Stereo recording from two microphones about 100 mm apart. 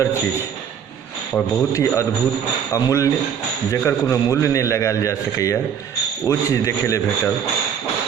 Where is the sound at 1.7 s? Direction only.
30° left (ahead or behind).